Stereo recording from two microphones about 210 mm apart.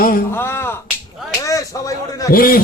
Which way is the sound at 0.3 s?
10° left (ahead or behind).